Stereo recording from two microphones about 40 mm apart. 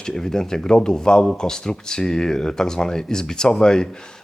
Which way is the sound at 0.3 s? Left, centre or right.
Centre.